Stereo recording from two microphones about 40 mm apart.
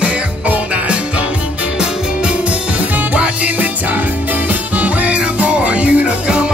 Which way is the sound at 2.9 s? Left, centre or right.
Right.